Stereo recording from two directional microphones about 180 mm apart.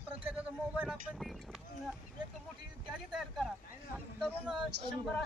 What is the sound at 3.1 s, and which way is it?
Speech, centre (ahead or behind).